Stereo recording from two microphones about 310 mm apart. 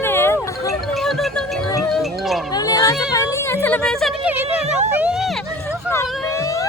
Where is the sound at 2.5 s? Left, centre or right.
Centre.